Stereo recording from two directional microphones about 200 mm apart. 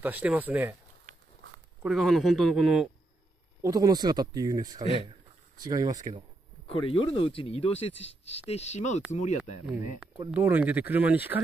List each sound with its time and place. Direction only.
0.0 s speech: 10° right (ahead or behind)
1.8 s a man's voice: centre (ahead or behind)
3.6 s speech: 15° right (ahead or behind)
6.7 s speech: 25° left (ahead or behind)
10.3 s speech: 10° right (ahead or behind)